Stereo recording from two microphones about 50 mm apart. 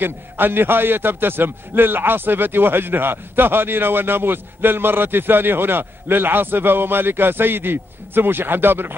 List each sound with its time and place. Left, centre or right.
0.0 s a man's voice: right